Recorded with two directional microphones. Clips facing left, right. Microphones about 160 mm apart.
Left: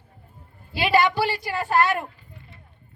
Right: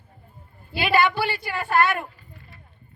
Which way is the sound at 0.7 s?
30° left (ahead or behind).